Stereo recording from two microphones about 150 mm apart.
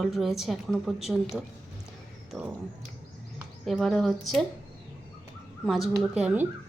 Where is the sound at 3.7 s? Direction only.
Centre (ahead or behind).